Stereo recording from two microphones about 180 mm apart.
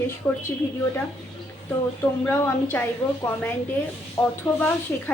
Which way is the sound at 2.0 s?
10° left (ahead or behind).